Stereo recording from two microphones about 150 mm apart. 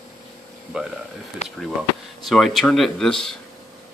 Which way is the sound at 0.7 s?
5° right (ahead or behind).